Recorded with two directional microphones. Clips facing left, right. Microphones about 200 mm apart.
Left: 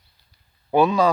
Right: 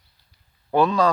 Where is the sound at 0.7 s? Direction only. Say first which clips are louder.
Left 2 dB; 10° left (ahead or behind).